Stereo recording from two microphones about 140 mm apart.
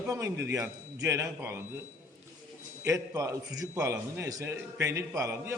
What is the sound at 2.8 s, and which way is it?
A man's voice, 20° right (ahead or behind).